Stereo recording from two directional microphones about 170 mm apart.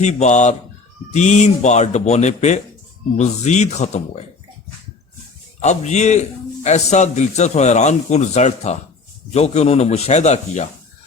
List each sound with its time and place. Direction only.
0.0 s a man's voice: 40° left (ahead or behind)
5.6 s a man's voice: 45° left (ahead or behind)